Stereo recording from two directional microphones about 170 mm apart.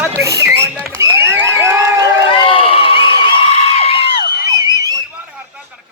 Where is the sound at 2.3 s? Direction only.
30° left (ahead or behind).